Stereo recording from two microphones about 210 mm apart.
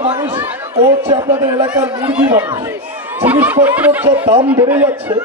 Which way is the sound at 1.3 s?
10° right (ahead or behind).